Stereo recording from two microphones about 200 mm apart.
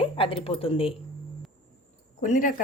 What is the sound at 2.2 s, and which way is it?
Speech, 40° left (ahead or behind).